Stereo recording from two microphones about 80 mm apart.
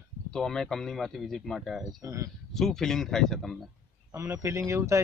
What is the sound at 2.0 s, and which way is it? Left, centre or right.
Speech, right.